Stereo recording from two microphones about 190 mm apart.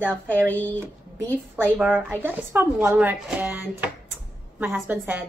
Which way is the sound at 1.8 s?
10° right (ahead or behind).